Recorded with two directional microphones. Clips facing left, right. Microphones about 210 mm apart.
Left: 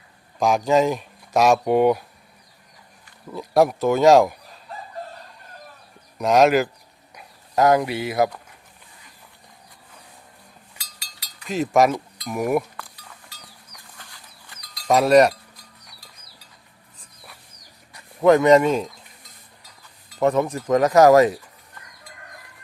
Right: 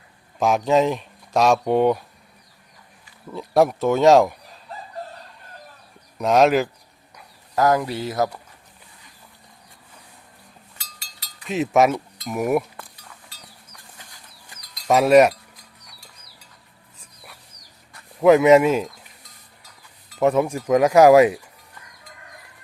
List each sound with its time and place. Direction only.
0.3 s speech: centre (ahead or behind)
3.3 s speech: centre (ahead or behind)
6.1 s speech: centre (ahead or behind)
7.2 s speech: 20° left (ahead or behind)
11.4 s speech: centre (ahead or behind)
14.3 s livestock: 5° right (ahead or behind)
18.2 s speech: 5° right (ahead or behind)
20.1 s speech: 5° right (ahead or behind)